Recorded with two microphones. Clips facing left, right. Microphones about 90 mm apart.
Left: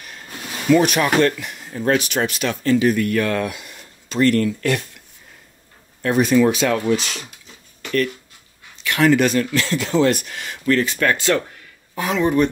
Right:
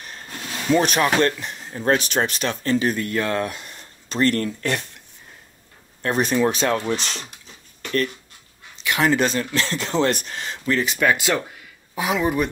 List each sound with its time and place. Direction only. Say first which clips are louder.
0.3 s a sound: left 1 dB; 5° left (ahead or behind)
0.7 s speech: left 1 dB; 30° right (ahead or behind)
6.0 s speech: left 4 dB; 35° right (ahead or behind)
7.8 s writing: left 2 dB; 35° right (ahead or behind)
8.8 s speech: left 4 dB; 20° right (ahead or behind)
10.6 s speech: left 3 dB; 20° right (ahead or behind)